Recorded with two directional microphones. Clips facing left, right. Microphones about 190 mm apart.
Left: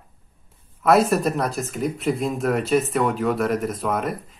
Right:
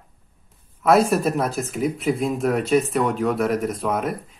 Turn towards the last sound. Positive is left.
turn(degrees=0)  # may be behind; listen again after turning